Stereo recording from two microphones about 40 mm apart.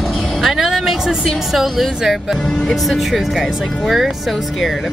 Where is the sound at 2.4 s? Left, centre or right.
Centre.